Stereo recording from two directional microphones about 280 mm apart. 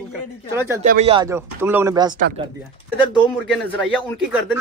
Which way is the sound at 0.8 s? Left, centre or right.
Right.